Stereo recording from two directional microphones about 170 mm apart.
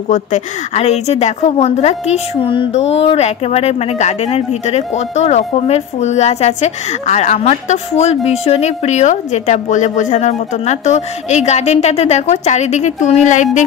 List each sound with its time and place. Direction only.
0.1 s a woman's voice: 40° left (ahead or behind)